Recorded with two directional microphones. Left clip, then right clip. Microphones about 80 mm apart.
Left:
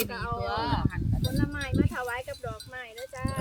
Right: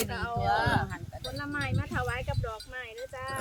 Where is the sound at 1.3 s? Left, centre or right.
Left.